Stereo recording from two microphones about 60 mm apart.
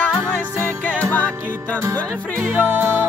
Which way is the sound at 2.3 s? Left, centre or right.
Right.